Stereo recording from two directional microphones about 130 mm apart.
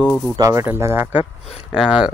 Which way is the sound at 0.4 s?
25° right (ahead or behind).